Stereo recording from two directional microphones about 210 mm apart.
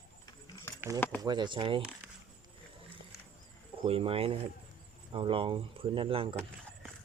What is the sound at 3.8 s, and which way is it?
Speech, 25° right (ahead or behind).